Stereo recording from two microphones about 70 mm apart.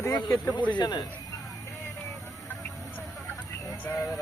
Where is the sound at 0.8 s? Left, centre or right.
Left.